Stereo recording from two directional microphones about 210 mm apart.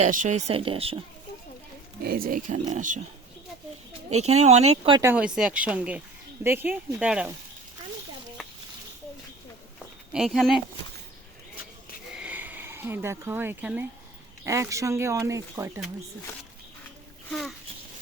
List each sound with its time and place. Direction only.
0.0 s speech: 35° right (ahead or behind)
2.0 s speech: 45° right (ahead or behind)
4.2 s speech: 30° right (ahead or behind)
4.9 s speech: 10° right (ahead or behind)
10.1 s speech: centre (ahead or behind)
12.1 s a sound: 5° right (ahead or behind)
14.4 s speech: 15° right (ahead or behind)